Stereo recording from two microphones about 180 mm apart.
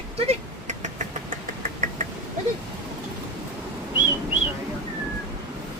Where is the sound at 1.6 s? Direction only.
50° right (ahead or behind).